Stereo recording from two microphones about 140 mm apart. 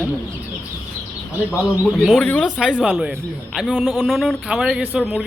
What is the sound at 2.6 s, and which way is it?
A man's voice, 5° right (ahead or behind).